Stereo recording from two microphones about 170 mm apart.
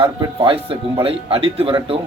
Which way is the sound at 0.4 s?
30° right (ahead or behind).